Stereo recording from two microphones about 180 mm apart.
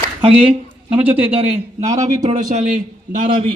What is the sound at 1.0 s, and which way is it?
Speech, 10° right (ahead or behind).